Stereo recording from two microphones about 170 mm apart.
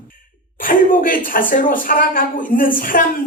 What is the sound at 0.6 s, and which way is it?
A woman's voice, 55° left (ahead or behind).